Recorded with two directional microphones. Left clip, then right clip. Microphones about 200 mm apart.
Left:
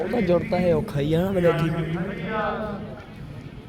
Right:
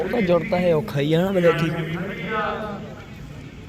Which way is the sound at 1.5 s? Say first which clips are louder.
Right 2 dB; 55° left (ahead or behind).